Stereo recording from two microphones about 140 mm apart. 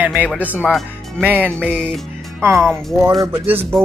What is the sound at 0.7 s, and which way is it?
Speech, centre (ahead or behind).